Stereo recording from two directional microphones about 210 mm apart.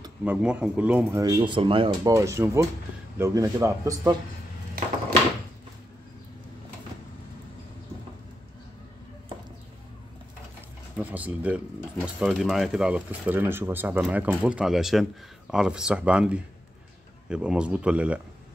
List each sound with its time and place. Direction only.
0.2 s speech: 5° right (ahead or behind)
1.2 s speech: 20° right (ahead or behind)
11.0 s speech: 5° right (ahead or behind)